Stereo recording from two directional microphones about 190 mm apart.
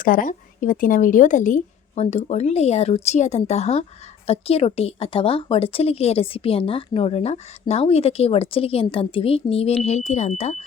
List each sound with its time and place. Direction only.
0.0 s speech: 45° left (ahead or behind)